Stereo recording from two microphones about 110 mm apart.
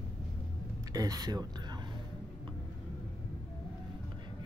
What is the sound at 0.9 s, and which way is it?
Speech, 35° right (ahead or behind).